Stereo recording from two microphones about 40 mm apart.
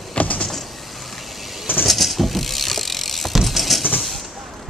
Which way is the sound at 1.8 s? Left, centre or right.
Centre.